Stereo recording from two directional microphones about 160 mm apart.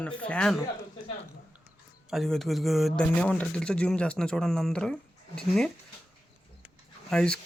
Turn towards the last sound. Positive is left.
turn(degrees=5)  # may be behind; listen again after turning